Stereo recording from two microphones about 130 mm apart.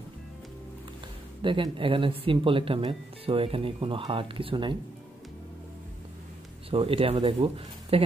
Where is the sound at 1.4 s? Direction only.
40° right (ahead or behind).